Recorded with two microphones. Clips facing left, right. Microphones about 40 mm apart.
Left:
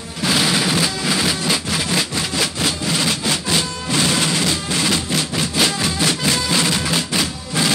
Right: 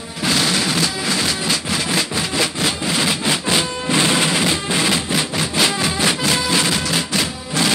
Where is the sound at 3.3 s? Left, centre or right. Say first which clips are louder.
Right 2 dB; centre.